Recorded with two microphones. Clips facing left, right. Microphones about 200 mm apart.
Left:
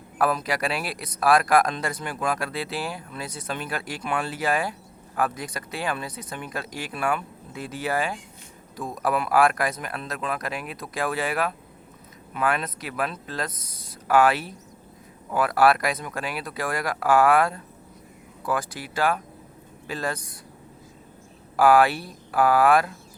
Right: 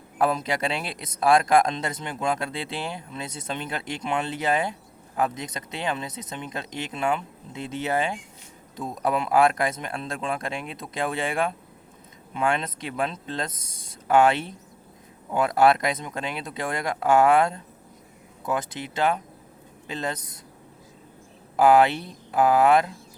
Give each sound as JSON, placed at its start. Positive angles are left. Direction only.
{"t": 0.2, "sound": "speech", "side_deg": -25}
{"t": 21.5, "sound": "speech", "side_deg": -20}